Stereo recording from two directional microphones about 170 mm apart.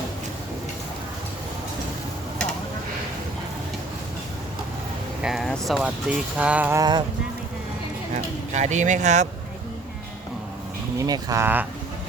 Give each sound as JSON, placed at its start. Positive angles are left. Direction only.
{"t": 5.2, "sound": "speech", "side_deg": 0}
{"t": 8.5, "sound": "speech", "side_deg": -45}
{"t": 11.0, "sound": "speech", "side_deg": -20}